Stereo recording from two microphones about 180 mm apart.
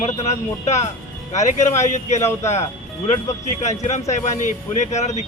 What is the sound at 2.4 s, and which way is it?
Speech, 35° left (ahead or behind).